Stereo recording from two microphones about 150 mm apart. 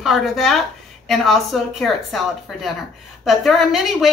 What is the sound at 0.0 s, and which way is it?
Speech, centre (ahead or behind).